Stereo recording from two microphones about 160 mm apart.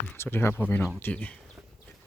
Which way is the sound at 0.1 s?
15° left (ahead or behind).